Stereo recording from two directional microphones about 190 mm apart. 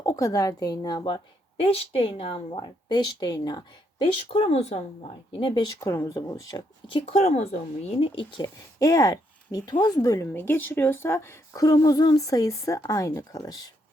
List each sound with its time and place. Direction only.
0.0 s a woman's voice: 20° left (ahead or behind)